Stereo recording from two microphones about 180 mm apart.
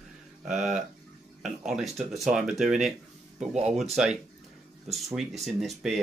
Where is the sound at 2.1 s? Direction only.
Centre (ahead or behind).